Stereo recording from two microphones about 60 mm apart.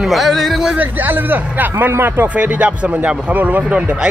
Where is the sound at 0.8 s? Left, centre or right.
Right.